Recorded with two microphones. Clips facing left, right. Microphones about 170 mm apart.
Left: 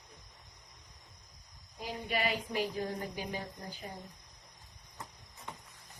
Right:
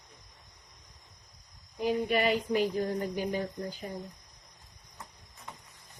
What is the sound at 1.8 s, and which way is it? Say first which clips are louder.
Speech: right 8 dB; 55° right (ahead or behind).